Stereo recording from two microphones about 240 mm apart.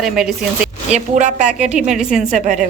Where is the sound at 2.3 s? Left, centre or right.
Right.